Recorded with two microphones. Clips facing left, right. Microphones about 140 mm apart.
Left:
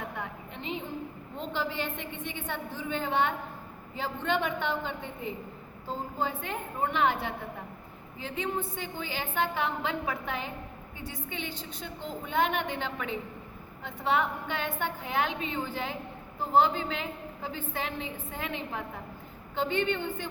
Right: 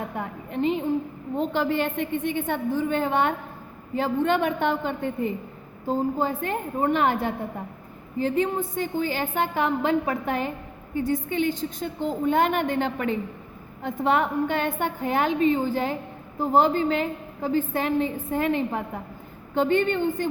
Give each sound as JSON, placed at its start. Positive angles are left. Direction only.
{"t": 0.2, "sound": "a woman's voice", "side_deg": -50}